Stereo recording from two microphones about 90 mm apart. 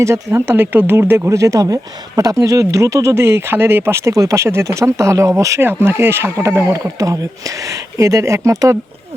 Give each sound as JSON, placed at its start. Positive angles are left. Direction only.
{"t": 0.0, "sound": "speech", "side_deg": -30}